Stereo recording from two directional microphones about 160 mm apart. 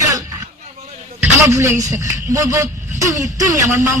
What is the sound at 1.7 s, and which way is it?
Speech, 50° right (ahead or behind).